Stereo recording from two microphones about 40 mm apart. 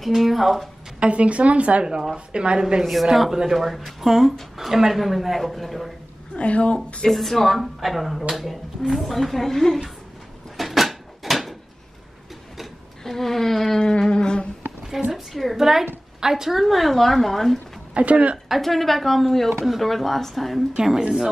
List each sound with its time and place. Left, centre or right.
0.0 s speech: centre
0.9 s a woman's voice: right
2.8 s speech: centre
6.3 s a woman's voice: left
7.1 s speech: centre
10.6 s a sound: centre
13.0 s a sound: centre
13.7 s a sound: centre
14.9 s a woman's voice: centre
16.6 s speech: centre
17.9 s a woman's voice: right
18.6 s speech: centre
21.0 s a woman's voice: centre